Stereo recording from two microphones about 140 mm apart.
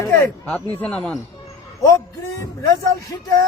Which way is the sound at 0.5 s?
5° left (ahead or behind).